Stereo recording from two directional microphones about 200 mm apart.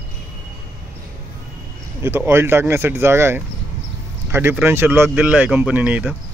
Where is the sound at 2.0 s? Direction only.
10° right (ahead or behind).